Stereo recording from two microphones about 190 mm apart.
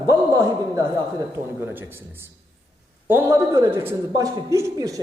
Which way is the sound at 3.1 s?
15° right (ahead or behind).